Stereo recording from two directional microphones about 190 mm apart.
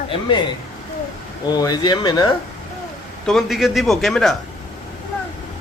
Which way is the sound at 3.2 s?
Centre (ahead or behind).